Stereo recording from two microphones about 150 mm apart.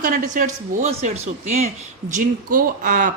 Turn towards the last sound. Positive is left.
turn(degrees=-65)  # may be behind; listen again after turning